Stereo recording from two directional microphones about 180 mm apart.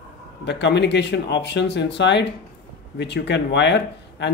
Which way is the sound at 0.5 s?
70° left (ahead or behind).